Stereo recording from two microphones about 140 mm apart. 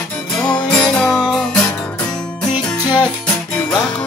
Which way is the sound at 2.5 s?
10° right (ahead or behind).